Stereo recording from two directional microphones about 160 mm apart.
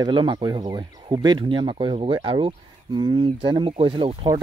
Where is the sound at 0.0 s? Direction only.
30° right (ahead or behind).